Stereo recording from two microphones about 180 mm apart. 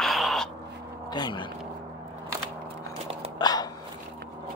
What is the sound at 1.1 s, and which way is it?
Speech, 25° left (ahead or behind).